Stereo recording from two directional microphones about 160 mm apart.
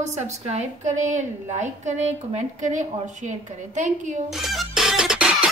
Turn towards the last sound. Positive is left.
turn(degrees=-5)  # may be behind; listen again after turning